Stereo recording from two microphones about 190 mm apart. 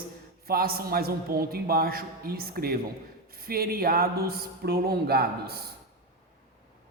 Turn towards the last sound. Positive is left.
turn(degrees=-55)  # may be behind; listen again after turning